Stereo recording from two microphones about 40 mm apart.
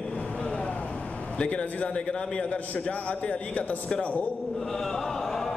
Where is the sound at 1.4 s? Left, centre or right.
Left.